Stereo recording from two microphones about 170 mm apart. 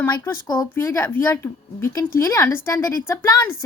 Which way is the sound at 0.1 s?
25° left (ahead or behind).